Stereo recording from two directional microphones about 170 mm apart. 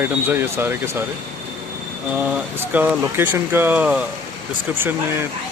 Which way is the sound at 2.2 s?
10° right (ahead or behind).